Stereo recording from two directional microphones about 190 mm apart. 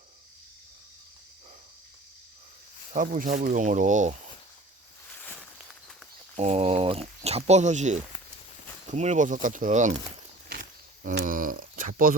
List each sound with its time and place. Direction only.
2.9 s speech: 45° right (ahead or behind)
5.1 s walk: 10° left (ahead or behind)
6.3 s speech: 35° right (ahead or behind)
10.5 s wild animals: 45° right (ahead or behind)
11.3 s speech: 45° right (ahead or behind)